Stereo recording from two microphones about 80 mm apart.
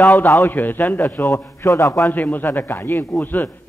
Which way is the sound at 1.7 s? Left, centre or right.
Left.